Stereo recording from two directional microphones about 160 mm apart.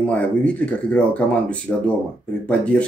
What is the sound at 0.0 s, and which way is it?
Speech, 10° left (ahead or behind).